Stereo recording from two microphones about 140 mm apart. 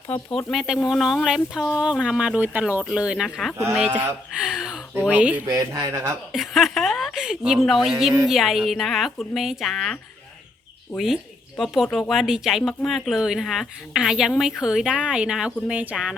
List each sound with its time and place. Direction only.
0.1 s speech: 10° left (ahead or behind); by 5.5 s 10° right (ahead or behind)
5.5 s speech: 25° right (ahead or behind)
6.3 s speech: centre (ahead or behind)